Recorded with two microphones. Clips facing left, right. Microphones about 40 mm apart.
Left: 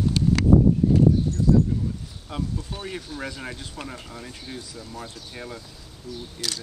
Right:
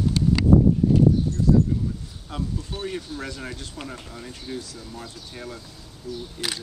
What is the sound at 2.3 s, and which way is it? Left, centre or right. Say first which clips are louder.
Speech: even; centre.